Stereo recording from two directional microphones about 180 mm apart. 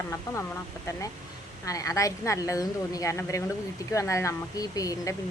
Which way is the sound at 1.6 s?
20° left (ahead or behind).